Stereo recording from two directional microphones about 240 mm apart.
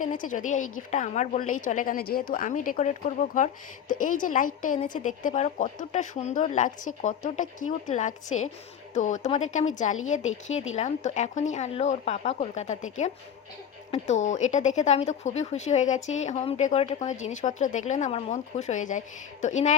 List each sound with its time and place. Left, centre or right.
0.0 s a woman's voice: left